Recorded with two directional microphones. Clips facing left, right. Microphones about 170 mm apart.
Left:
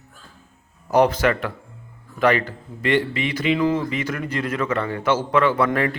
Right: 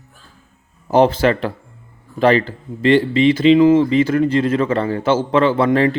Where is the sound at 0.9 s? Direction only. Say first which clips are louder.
Right 4 dB; 30° right (ahead or behind).